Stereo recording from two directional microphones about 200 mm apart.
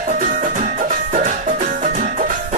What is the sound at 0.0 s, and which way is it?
Music, 40° right (ahead or behind).